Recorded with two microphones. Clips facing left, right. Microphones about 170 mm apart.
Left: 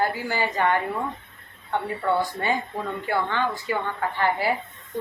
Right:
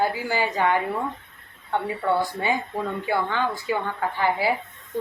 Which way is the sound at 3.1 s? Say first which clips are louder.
Left 1 dB; 10° right (ahead or behind).